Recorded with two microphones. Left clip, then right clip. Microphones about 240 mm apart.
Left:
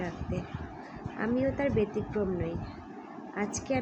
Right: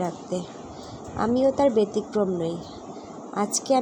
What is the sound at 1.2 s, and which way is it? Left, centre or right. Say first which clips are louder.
Speech: right 9 dB; right.